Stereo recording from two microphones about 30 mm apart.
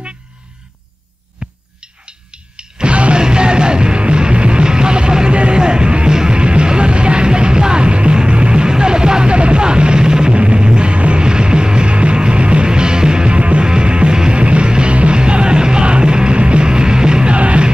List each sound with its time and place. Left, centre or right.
1.4 s a sound: right
2.0 s music: right
10.3 s music: right
13.4 s music: right
13.7 s music: right
17.4 s music: right